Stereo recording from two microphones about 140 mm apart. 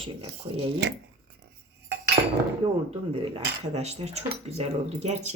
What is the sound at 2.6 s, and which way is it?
Speech, 45° right (ahead or behind).